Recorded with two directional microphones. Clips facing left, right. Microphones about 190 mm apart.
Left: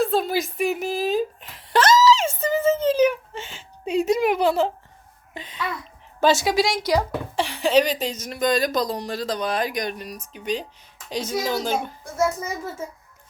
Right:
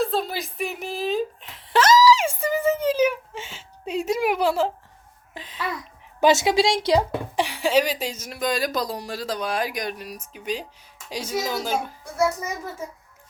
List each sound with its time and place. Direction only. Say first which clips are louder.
0.0 s a sound: left 3 dB; centre (ahead or behind)
2.0 s whimper: even; 15° right (ahead or behind)
5.3 s a child's voice: left 2 dB; centre (ahead or behind)
6.1 s speech: right 1 dB; 20° right (ahead or behind)
7.3 s speech: left 2 dB; 10° right (ahead or behind)